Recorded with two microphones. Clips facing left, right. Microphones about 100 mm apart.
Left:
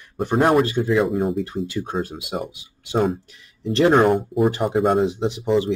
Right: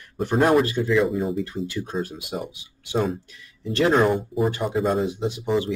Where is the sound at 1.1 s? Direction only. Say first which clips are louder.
Left 3 dB; 60° left (ahead or behind).